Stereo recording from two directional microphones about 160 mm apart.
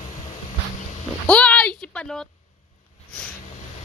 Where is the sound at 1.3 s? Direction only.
5° left (ahead or behind).